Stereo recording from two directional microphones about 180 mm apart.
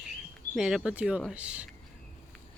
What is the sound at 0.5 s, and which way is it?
Speech, 5° right (ahead or behind).